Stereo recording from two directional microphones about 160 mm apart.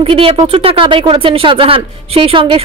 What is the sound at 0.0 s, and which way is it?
Speech, 35° right (ahead or behind).